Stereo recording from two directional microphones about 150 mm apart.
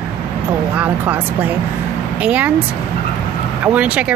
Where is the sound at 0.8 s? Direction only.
10° right (ahead or behind).